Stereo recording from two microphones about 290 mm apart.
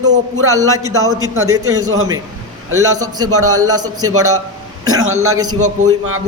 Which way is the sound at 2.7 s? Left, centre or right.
Right.